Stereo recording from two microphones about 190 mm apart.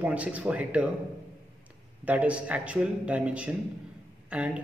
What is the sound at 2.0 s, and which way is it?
A man's voice, 5° right (ahead or behind).